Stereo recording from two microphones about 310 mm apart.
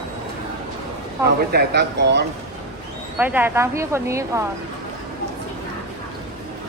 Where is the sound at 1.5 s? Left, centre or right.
Right.